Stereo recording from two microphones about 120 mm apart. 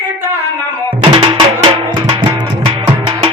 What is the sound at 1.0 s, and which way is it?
Music, 40° right (ahead or behind).